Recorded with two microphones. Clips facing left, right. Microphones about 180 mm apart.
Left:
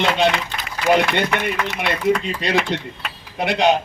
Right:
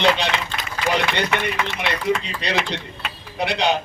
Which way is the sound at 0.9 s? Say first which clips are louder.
Left 3 dB; 50° left (ahead or behind).